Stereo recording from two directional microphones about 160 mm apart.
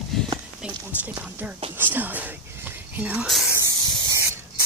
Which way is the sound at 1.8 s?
10° right (ahead or behind).